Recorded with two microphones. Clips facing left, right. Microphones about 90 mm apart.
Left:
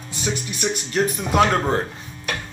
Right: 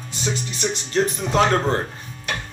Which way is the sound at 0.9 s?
10° left (ahead or behind).